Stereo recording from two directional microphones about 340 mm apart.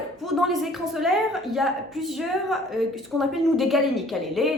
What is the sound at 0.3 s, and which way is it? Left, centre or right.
Speech, centre.